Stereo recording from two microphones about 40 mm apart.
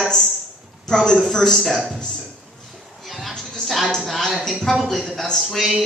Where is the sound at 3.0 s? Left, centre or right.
Centre.